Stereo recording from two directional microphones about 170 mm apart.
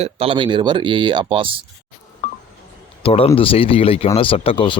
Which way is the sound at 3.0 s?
35° left (ahead or behind).